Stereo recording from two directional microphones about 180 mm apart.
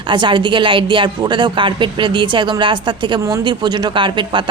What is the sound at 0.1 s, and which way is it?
Speech, 25° right (ahead or behind).